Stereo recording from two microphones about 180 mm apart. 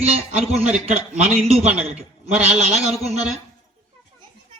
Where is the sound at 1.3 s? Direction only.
35° right (ahead or behind).